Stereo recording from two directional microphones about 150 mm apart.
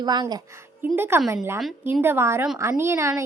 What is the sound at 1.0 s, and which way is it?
A woman's voice, 15° right (ahead or behind).